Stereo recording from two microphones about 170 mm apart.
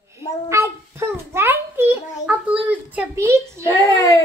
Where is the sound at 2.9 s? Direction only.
15° right (ahead or behind).